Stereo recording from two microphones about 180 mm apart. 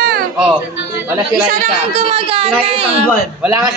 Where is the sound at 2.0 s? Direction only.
30° right (ahead or behind).